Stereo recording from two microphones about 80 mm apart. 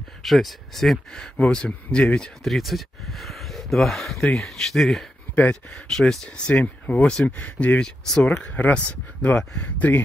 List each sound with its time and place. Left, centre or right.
0.2 s speech: centre